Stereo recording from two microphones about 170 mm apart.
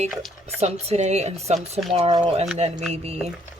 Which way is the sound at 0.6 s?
40° right (ahead or behind).